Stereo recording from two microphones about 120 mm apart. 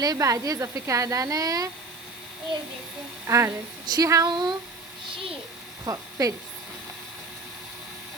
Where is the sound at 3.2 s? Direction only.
25° right (ahead or behind).